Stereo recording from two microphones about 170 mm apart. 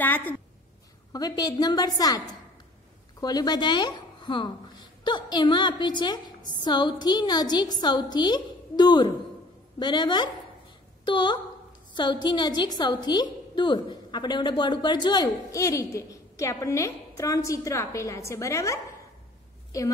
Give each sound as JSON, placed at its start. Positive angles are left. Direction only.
{"t": 0.0, "sound": "a woman's voice", "side_deg": 10}
{"t": 1.1, "sound": "a woman's voice", "side_deg": 20}